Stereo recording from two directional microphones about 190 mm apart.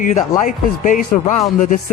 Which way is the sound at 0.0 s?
40° left (ahead or behind).